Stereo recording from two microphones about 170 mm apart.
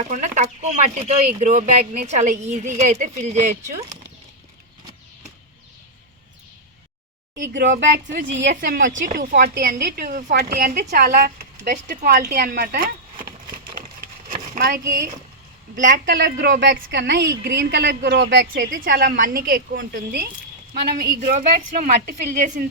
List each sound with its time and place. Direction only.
0.0 s a woman's voice: 45° right (ahead or behind)
7.3 s speech: 90° right
8.4 s a woman's voice: 75° right (ahead or behind); by 9.3 s 50° right (ahead or behind)
9.3 s a woman's voice: 60° right (ahead or behind)
14.6 s a woman's voice: 65° right (ahead or behind)
15.7 s a woman's voice: 50° right (ahead or behind)
16.0 s speech: 85° right
18.5 s a woman's voice: 55° right (ahead or behind)
21.2 s a woman's voice: 45° right (ahead or behind)